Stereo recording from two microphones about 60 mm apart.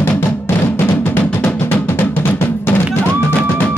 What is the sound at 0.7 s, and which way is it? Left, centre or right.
Drum, left.